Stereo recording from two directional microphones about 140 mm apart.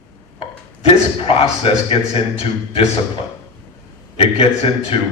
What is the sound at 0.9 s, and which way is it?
A man's voice, 40° left (ahead or behind).